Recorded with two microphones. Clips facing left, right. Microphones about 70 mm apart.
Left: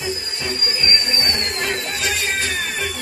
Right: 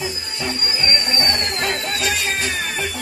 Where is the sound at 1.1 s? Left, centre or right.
Right.